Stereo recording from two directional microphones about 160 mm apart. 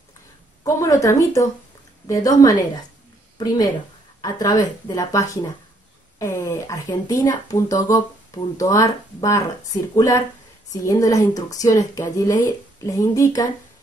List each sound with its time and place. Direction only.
0.7 s speech: 20° left (ahead or behind)